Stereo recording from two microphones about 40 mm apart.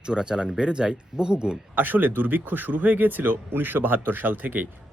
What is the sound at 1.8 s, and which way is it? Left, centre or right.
Speech, right.